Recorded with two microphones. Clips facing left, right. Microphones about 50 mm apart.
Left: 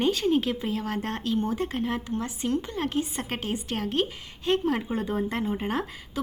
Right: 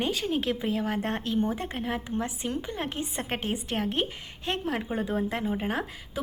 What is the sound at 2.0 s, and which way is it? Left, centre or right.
A woman's voice, centre.